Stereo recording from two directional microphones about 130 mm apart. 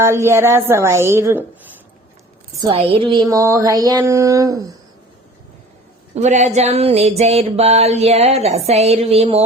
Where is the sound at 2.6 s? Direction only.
45° right (ahead or behind); by 4.6 s 25° right (ahead or behind).